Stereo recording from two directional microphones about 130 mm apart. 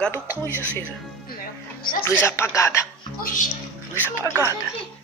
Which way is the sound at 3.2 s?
90° left.